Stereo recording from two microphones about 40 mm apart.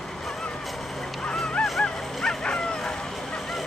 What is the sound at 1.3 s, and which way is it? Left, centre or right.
Honk, centre.